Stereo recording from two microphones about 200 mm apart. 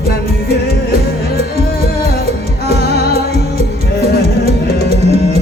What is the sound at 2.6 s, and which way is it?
Music, 50° left (ahead or behind).